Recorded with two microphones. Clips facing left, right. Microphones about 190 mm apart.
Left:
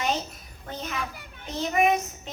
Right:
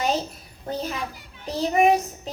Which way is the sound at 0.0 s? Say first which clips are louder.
Right 4 dB; 35° right (ahead or behind).